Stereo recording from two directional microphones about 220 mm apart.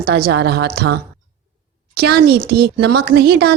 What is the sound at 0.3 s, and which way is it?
Speech, 50° right (ahead or behind).